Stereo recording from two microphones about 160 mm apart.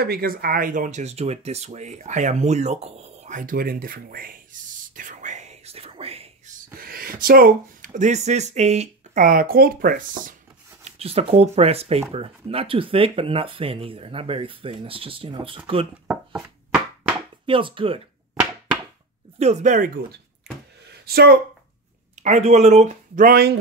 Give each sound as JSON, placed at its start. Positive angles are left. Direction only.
{"t": 0.0, "sound": "speech", "side_deg": -70}
{"t": 4.9, "sound": "whispering", "side_deg": -50}
{"t": 6.5, "sound": "speech", "side_deg": -65}
{"t": 9.2, "sound": "speech", "side_deg": -65}
{"t": 10.8, "sound": "speech", "side_deg": -40}
{"t": 16.1, "sound": "speech", "side_deg": -5}
{"t": 17.5, "sound": "speech", "side_deg": -35}
{"t": 18.4, "sound": "a sound", "side_deg": -20}
{"t": 19.3, "sound": "speech", "side_deg": -45}
{"t": 21.0, "sound": "speech", "side_deg": -75}
{"t": 22.2, "sound": "speech", "side_deg": -45}